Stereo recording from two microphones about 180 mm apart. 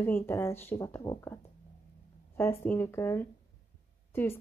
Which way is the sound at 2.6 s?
10° left (ahead or behind).